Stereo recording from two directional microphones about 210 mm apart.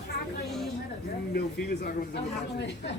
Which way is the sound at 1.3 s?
45° left (ahead or behind).